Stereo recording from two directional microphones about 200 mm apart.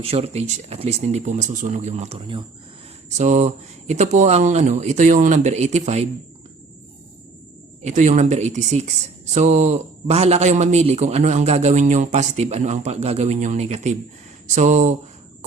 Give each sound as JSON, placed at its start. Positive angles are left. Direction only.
{"t": 0.0, "sound": "a man's voice", "side_deg": -30}
{"t": 7.8, "sound": "a man's voice", "side_deg": -35}